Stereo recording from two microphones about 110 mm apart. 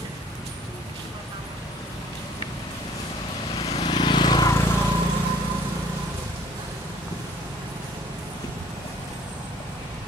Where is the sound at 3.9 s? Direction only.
45° left (ahead or behind).